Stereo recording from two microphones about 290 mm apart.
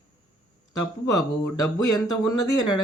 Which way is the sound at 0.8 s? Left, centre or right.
Left.